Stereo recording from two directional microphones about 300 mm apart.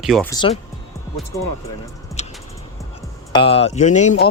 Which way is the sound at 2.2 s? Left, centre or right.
Left.